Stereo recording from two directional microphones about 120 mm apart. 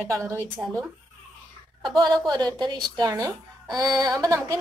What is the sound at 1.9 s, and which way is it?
Speech, 35° right (ahead or behind).